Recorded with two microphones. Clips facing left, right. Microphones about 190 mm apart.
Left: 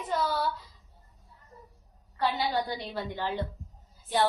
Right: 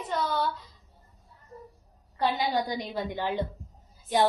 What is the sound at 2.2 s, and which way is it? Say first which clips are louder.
A woman's voice: right 2 dB; 15° right (ahead or behind).